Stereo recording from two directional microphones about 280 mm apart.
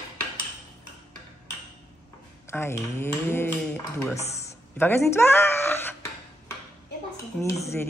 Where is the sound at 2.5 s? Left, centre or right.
Centre.